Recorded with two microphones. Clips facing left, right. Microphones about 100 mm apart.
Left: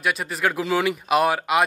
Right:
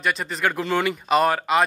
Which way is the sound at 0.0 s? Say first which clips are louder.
Even; 5° left (ahead or behind).